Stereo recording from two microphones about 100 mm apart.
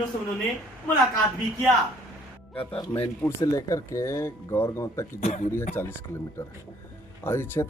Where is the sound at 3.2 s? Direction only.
30° left (ahead or behind).